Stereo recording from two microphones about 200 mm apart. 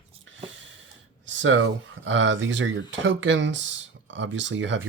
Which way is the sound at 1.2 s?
70° right (ahead or behind).